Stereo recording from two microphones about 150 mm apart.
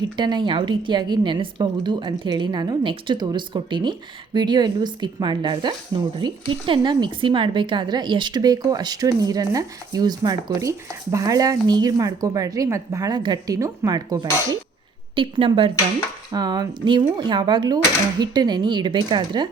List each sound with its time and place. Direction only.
0.2 s a woman's voice: 30° right (ahead or behind)